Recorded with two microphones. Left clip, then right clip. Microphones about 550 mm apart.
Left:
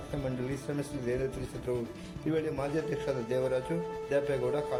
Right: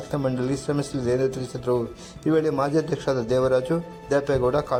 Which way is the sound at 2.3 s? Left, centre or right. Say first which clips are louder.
Right 10 dB; left.